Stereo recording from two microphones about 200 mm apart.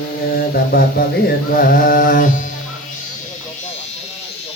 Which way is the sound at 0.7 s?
50° left (ahead or behind).